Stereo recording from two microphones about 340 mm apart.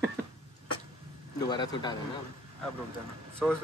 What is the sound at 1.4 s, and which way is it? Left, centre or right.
Speech, centre.